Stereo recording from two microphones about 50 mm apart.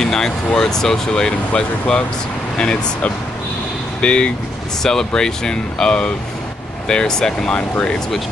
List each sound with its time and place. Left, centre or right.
0.0 s speech: centre